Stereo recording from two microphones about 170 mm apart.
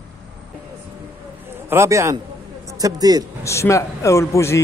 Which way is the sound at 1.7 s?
15° right (ahead or behind).